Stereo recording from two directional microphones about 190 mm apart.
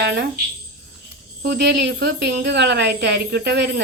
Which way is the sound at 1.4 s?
65° right (ahead or behind).